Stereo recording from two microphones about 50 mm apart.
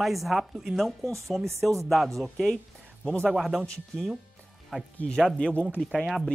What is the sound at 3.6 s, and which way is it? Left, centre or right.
Speech, centre.